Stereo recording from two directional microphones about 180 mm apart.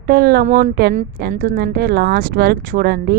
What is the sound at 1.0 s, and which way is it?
Speech, 50° right (ahead or behind).